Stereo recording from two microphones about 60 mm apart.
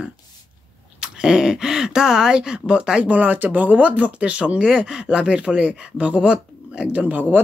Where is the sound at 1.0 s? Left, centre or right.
Centre; by 7.4 s right.